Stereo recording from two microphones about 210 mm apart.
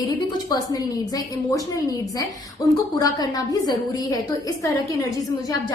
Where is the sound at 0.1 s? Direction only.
15° left (ahead or behind).